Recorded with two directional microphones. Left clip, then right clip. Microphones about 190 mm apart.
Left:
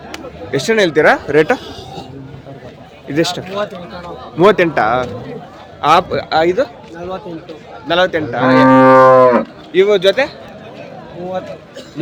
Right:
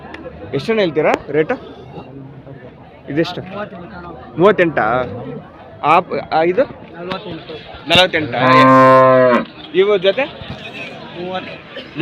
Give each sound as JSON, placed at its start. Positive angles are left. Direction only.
{"t": 0.5, "sound": "cattle", "side_deg": 15}
{"t": 1.0, "sound": "speech", "side_deg": 35}
{"t": 3.1, "sound": "a man's voice", "side_deg": 20}
{"t": 5.8, "sound": "cattle", "side_deg": 20}
{"t": 7.9, "sound": "cattle", "side_deg": 5}